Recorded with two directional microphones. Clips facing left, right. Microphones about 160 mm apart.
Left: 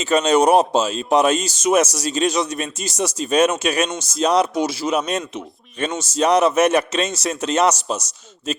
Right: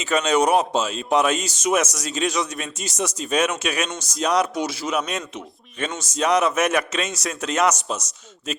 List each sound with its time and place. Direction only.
0.0 s speech: 30° left (ahead or behind)